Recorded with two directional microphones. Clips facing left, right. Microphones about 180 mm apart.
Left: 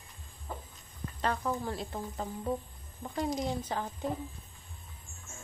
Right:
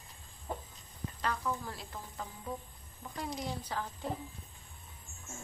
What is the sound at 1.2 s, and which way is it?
Speech, 30° left (ahead or behind).